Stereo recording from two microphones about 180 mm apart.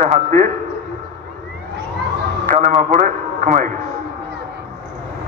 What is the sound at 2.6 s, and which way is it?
A man's voice, 40° right (ahead or behind).